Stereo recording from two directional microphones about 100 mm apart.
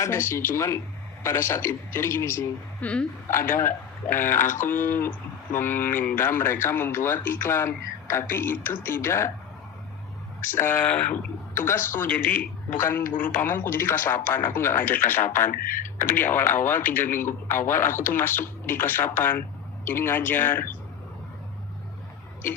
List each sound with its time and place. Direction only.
0.0 s speech: 25° left (ahead or behind)
2.8 s speech: 10° left (ahead or behind)
3.2 s speech: 25° left (ahead or behind)
10.4 s speech: 20° left (ahead or behind)